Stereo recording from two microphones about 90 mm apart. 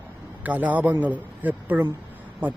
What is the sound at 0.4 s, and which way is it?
A man's voice, 20° right (ahead or behind).